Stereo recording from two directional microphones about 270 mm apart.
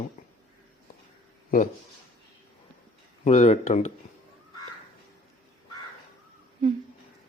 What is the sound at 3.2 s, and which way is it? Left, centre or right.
Speech, left.